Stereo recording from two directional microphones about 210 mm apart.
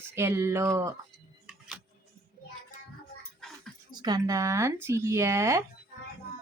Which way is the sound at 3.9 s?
20° right (ahead or behind).